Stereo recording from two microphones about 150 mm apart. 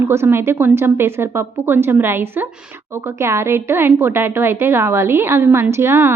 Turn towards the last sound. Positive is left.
turn(degrees=-15)  # may be behind; listen again after turning